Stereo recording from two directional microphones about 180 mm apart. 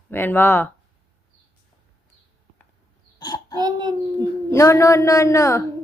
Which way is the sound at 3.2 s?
20° left (ahead or behind).